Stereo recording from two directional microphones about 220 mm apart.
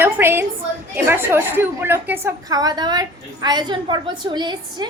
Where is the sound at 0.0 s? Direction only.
10° right (ahead or behind).